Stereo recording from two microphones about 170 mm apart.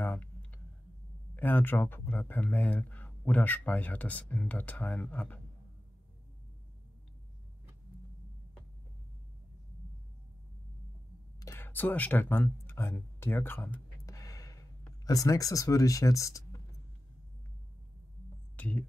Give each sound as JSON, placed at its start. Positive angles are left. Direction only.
{"t": 0.0, "sound": "clicking", "side_deg": 10}
{"t": 1.3, "sound": "speech", "side_deg": 10}
{"t": 11.3, "sound": "a sound", "side_deg": 15}
{"t": 15.0, "sound": "speech", "side_deg": 20}
{"t": 18.6, "sound": "speech", "side_deg": 10}